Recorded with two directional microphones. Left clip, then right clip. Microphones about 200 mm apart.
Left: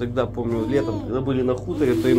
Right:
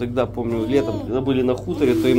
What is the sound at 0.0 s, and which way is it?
Speech, 5° right (ahead or behind).